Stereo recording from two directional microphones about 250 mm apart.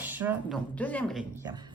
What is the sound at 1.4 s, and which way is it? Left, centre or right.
Speech, centre.